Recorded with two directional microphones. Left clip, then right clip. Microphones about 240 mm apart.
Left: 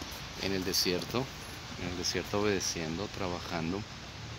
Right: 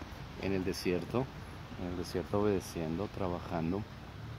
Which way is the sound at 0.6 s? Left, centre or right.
Centre.